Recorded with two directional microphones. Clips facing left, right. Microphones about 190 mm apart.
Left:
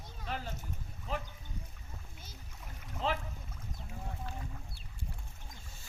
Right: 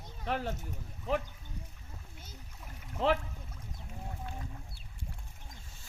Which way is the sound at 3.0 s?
65° right (ahead or behind).